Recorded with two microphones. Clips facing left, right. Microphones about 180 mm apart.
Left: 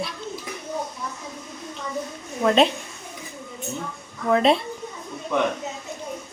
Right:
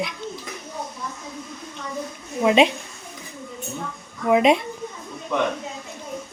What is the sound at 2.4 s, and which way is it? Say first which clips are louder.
Speech: right 1 dB; 10° right (ahead or behind).